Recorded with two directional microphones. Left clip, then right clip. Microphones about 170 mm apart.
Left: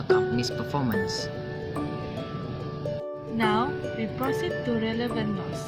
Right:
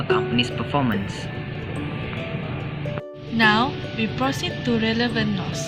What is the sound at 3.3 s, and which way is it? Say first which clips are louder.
Speech: right 7 dB; 25° left (ahead or behind).